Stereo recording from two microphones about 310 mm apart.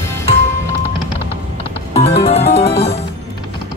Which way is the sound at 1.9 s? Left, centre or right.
Left.